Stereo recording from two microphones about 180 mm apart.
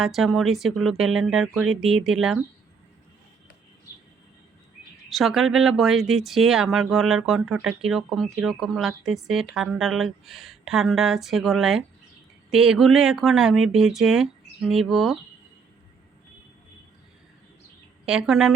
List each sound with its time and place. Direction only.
0.0 s speech: centre (ahead or behind)
5.0 s speech: centre (ahead or behind)
18.0 s speech: 5° right (ahead or behind)